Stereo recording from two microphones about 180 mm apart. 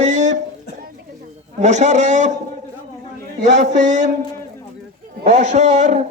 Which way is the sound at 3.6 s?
40° right (ahead or behind).